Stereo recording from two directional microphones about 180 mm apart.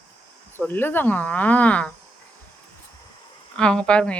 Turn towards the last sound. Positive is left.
turn(degrees=5)  # may be behind; listen again after turning